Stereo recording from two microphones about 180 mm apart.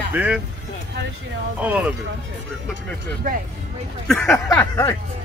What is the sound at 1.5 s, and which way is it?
Speech, 10° right (ahead or behind).